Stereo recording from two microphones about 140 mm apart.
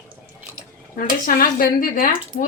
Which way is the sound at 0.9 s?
85° left.